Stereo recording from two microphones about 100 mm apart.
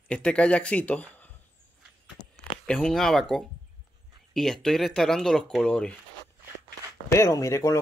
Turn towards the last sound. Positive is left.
turn(degrees=30)  # may be behind; listen again after turning